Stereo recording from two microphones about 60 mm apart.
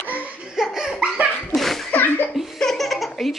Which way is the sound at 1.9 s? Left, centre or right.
Left.